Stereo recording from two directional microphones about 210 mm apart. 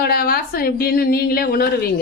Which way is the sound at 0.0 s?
45° left (ahead or behind).